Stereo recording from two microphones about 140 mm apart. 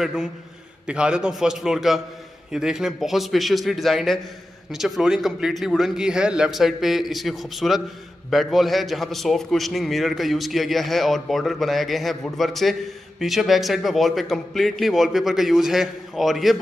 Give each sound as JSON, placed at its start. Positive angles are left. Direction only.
{"t": 0.0, "sound": "a man's voice", "side_deg": -5}